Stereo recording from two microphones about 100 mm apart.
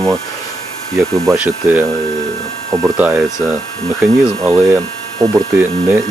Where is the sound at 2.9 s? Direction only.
20° right (ahead or behind).